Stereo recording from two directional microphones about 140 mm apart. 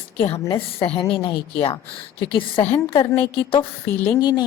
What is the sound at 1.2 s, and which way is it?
Speech, 40° left (ahead or behind).